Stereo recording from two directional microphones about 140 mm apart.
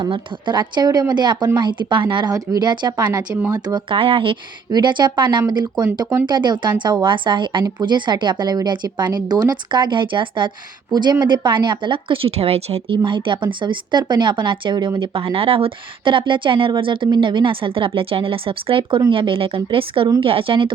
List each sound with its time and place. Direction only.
0.0 s speech: 35° right (ahead or behind)
3.8 s speech: 40° right (ahead or behind)
13.0 s speech: 35° right (ahead or behind)